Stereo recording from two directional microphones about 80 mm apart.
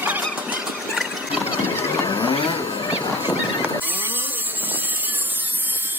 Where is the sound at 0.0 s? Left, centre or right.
Centre.